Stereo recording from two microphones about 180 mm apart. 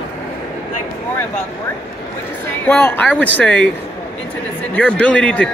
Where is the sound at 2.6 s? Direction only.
10° left (ahead or behind).